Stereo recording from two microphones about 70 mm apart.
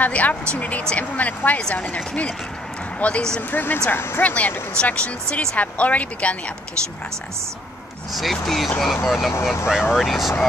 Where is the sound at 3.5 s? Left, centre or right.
Left.